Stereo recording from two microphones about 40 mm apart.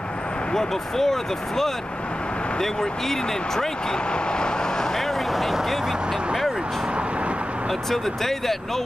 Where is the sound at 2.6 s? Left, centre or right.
Centre.